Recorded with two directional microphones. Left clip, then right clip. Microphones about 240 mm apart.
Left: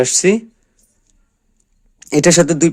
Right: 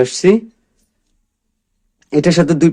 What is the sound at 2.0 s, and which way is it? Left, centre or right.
Speech, left.